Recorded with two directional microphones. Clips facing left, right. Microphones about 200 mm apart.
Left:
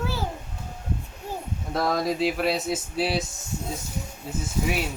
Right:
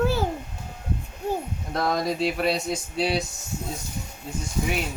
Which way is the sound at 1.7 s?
Centre (ahead or behind).